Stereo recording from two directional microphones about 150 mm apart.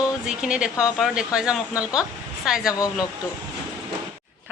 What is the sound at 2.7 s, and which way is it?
Speech, 25° left (ahead or behind).